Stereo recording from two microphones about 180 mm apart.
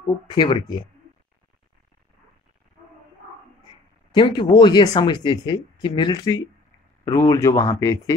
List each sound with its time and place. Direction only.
0.3 s speech: 25° left (ahead or behind)
4.1 s speech: 25° left (ahead or behind)